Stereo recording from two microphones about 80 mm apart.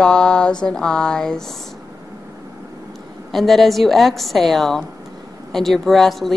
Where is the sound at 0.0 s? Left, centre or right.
Centre.